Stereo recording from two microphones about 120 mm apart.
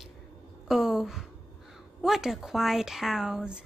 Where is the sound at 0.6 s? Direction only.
5° right (ahead or behind).